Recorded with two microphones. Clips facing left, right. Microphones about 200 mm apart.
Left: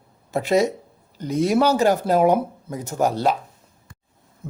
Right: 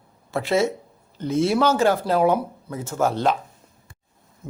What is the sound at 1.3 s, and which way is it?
Speech, 40° left (ahead or behind).